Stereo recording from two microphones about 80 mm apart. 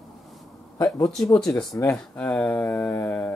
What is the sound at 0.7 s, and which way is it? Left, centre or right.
Speech, left.